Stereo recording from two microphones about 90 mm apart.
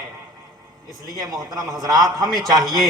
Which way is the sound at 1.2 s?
45° right (ahead or behind).